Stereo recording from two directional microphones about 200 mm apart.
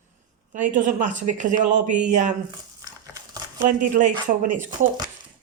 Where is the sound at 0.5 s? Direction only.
40° right (ahead or behind).